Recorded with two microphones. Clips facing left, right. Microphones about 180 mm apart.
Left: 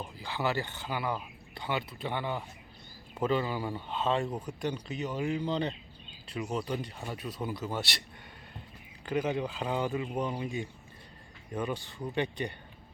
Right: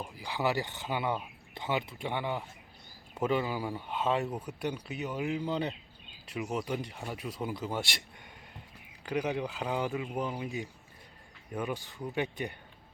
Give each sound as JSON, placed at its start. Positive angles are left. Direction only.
{"t": 0.0, "sound": "a man's voice", "side_deg": -15}
{"t": 9.0, "sound": "a man's voice", "side_deg": -10}